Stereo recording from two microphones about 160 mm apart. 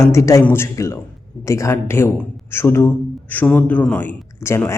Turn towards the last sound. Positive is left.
turn(degrees=15)  # may be behind; listen again after turning